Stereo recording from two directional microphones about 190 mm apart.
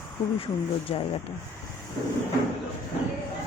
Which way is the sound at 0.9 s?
30° left (ahead or behind).